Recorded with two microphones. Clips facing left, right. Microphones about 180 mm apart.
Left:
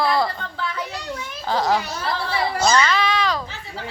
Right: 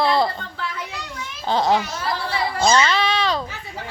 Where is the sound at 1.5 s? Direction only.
25° right (ahead or behind).